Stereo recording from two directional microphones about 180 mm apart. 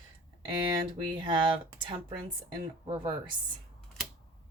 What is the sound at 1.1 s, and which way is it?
Speech, 25° right (ahead or behind).